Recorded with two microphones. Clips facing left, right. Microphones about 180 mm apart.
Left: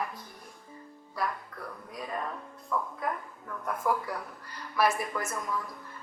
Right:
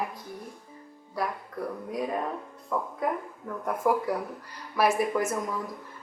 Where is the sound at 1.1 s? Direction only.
15° right (ahead or behind).